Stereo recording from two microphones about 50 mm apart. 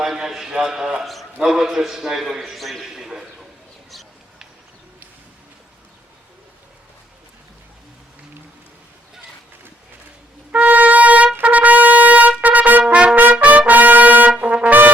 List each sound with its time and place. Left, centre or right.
0.0 s a man's voice: centre
2.9 s a man's voice: centre
10.5 s trumpet: right
12.9 s trumpet: right